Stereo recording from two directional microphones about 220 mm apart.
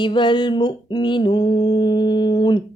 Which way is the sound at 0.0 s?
20° left (ahead or behind).